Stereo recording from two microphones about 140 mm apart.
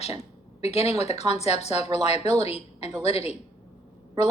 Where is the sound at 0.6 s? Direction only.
50° left (ahead or behind).